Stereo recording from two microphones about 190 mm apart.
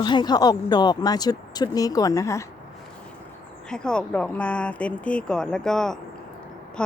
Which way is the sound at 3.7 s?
5° left (ahead or behind).